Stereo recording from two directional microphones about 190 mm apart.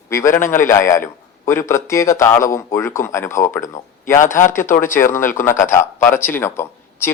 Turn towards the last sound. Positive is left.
turn(degrees=10)  # may be behind; listen again after turning